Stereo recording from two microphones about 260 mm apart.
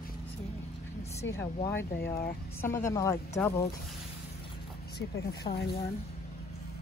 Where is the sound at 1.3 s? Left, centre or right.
Centre.